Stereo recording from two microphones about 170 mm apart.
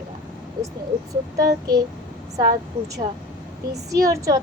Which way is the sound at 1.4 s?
20° right (ahead or behind).